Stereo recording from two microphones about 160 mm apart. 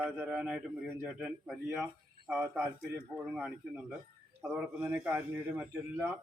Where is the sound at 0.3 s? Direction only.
5° right (ahead or behind).